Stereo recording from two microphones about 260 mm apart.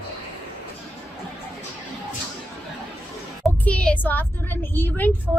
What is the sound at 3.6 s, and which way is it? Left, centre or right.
A woman's voice, centre.